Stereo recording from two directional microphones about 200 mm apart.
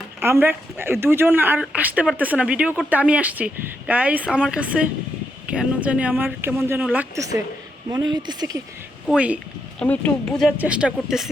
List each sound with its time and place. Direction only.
0.2 s speech: 10° right (ahead or behind)
9.0 s speech: 5° right (ahead or behind)
9.8 s speech: 10° left (ahead or behind)